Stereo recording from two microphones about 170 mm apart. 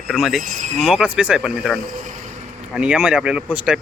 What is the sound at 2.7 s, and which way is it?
Speech, 5° right (ahead or behind).